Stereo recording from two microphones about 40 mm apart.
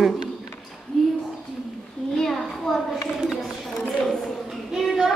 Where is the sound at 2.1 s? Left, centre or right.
Centre.